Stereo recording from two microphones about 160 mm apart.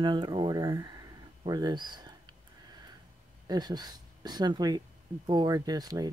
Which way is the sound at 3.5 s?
25° right (ahead or behind).